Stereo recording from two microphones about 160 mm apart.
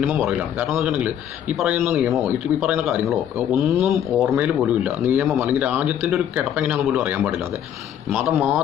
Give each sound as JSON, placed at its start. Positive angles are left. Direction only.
{"t": 0.0, "sound": "a man's voice", "side_deg": -5}